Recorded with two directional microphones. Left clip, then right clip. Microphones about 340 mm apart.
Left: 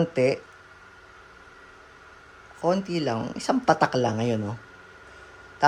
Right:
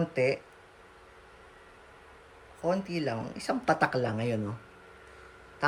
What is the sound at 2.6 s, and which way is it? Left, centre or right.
Speech, centre.